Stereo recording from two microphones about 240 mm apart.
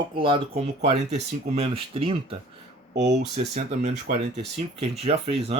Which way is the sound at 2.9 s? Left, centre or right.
Right.